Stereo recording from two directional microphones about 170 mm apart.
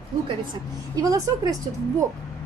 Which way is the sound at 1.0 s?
20° right (ahead or behind).